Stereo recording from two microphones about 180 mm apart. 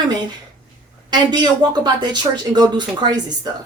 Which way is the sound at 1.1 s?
25° right (ahead or behind).